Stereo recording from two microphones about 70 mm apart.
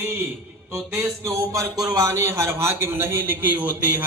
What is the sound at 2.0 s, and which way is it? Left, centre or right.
A man's voice, right.